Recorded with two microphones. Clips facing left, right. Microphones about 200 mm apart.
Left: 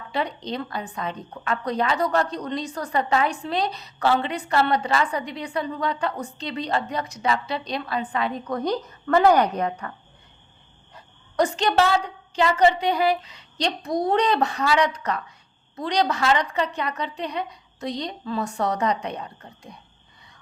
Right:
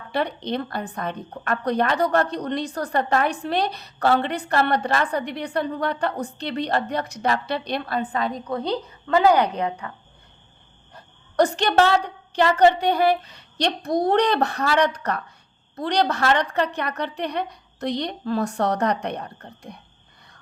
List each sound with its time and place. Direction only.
0.1 s a woman's voice: 60° right (ahead or behind)
8.4 s a woman's voice: 30° right (ahead or behind)
9.0 s speech: 15° right (ahead or behind)
10.9 s a woman's voice: 65° right (ahead or behind)